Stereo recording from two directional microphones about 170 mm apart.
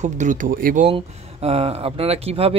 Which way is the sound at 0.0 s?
45° right (ahead or behind).